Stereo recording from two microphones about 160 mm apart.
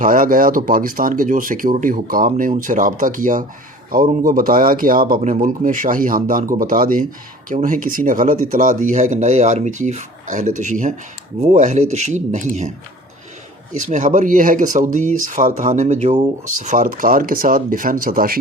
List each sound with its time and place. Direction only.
0.0 s speech: 60° right (ahead or behind)
2.3 s speech: 50° right (ahead or behind)
13.7 s speech: 50° right (ahead or behind); by 18.3 s 65° right (ahead or behind)